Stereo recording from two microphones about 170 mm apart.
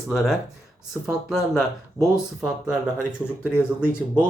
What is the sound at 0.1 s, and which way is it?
Speech, centre (ahead or behind).